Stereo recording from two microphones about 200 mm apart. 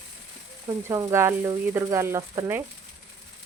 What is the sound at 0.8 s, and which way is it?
Speech, 15° right (ahead or behind).